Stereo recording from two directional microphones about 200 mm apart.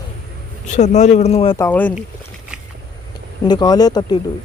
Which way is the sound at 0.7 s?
35° left (ahead or behind).